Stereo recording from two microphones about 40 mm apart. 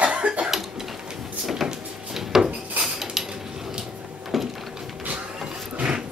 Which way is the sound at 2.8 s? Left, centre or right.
Centre.